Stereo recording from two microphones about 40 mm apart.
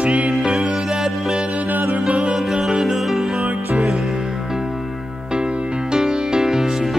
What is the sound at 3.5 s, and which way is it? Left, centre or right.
Music, right.